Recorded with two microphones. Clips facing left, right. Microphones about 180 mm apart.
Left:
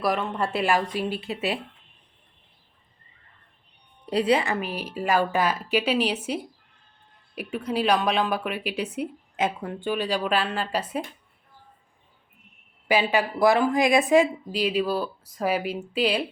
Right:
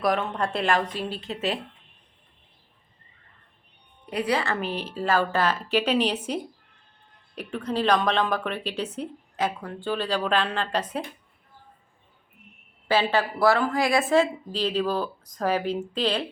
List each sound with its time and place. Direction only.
0.0 s a woman's voice: centre (ahead or behind)
4.0 s a woman's voice: 30° left (ahead or behind)
4.6 s a woman's voice: 10° left (ahead or behind)
7.3 s a woman's voice: 10° left (ahead or behind)
9.4 s a woman's voice: 20° left (ahead or behind)
9.9 s a woman's voice: 10° left (ahead or behind)
12.9 s a woman's voice: 15° left (ahead or behind)